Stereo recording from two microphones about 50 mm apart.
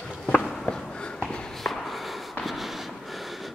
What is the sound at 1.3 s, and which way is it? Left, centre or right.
Walk, centre.